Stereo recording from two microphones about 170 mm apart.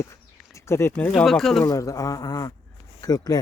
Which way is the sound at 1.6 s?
20° left (ahead or behind).